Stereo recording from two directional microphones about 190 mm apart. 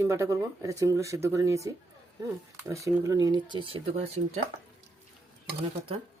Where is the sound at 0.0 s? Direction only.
15° right (ahead or behind); by 4.4 s 35° right (ahead or behind).